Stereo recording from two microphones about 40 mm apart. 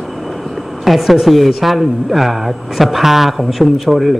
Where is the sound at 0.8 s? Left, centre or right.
Centre.